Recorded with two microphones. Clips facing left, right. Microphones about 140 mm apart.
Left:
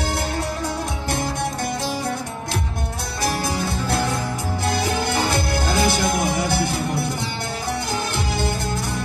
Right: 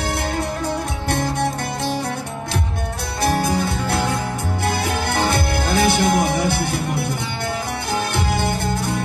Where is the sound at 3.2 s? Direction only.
60° right (ahead or behind).